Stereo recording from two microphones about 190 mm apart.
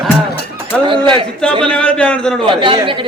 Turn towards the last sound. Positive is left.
turn(degrees=-25)  # may be behind; listen again after turning